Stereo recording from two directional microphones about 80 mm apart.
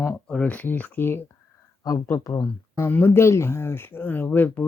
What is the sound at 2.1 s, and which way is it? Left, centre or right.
Speech, left.